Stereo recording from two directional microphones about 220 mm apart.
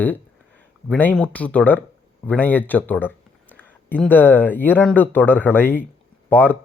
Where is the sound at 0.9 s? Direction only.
5° left (ahead or behind).